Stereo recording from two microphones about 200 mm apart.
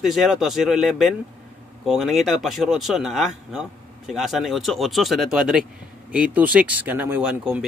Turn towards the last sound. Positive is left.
turn(degrees=-5)  # may be behind; listen again after turning